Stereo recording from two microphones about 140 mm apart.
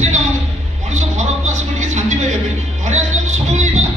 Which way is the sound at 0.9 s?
60° right (ahead or behind).